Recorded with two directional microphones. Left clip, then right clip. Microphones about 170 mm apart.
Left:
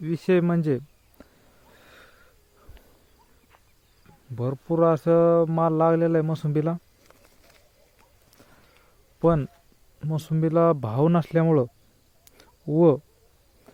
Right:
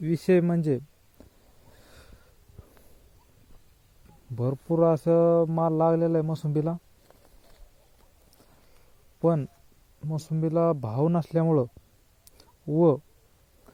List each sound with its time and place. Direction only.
0.0 s speech: 10° right (ahead or behind)
0.4 s speech: 10° left (ahead or behind)
1.7 s wheeze: centre (ahead or behind)
4.5 s speech: 5° left (ahead or behind)
6.5 s a sound: 15° left (ahead or behind)
9.2 s speech: 15° left (ahead or behind)
10.0 s speech: 30° left (ahead or behind)
12.6 s speech: 20° left (ahead or behind)